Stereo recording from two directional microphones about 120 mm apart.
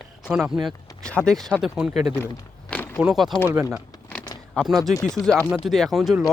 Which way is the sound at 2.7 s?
10° left (ahead or behind).